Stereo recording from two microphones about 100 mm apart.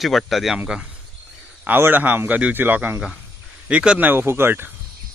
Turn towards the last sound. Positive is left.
turn(degrees=-20)  # may be behind; listen again after turning